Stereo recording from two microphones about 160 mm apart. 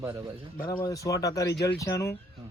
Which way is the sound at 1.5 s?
90° left.